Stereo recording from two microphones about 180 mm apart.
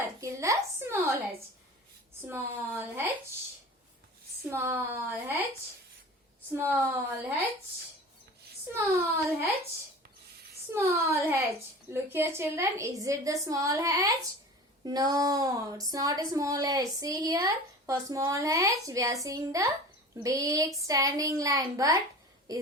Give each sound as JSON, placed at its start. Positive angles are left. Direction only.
{"t": 0.0, "sound": "a sound", "side_deg": -15}
{"t": 2.2, "sound": "a woman's voice", "side_deg": -10}
{"t": 4.5, "sound": "a woman's voice", "side_deg": -15}
{"t": 6.6, "sound": "a woman's voice", "side_deg": -15}
{"t": 8.7, "sound": "a woman's voice", "side_deg": -10}
{"t": 10.7, "sound": "a woman's voice", "side_deg": -15}